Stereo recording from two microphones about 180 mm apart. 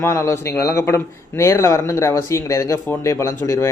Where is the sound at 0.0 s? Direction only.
15° left (ahead or behind).